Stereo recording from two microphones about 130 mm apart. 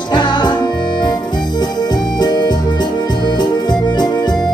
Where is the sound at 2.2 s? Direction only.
30° left (ahead or behind).